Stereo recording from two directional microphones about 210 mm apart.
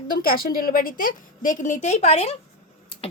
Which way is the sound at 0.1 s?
45° left (ahead or behind).